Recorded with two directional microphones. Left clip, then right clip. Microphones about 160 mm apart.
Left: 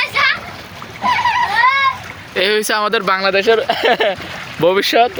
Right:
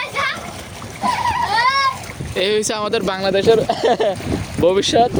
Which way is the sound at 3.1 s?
25° right (ahead or behind).